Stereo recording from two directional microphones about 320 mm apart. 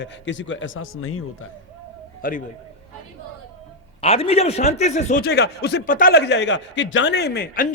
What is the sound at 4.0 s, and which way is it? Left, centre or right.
Speech, centre.